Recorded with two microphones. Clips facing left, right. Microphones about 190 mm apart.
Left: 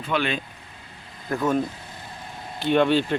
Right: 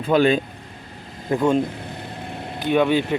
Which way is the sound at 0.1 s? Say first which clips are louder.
Right 9 dB; 40° right (ahead or behind).